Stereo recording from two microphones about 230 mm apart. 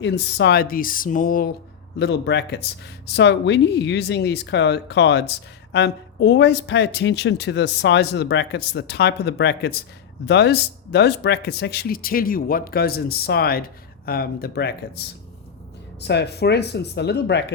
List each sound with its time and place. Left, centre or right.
0.0 s speech: left
2.0 s speech: left